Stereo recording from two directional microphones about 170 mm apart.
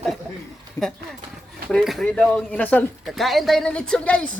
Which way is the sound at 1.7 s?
Centre (ahead or behind).